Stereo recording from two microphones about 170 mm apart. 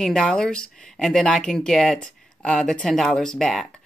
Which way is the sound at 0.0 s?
5° left (ahead or behind).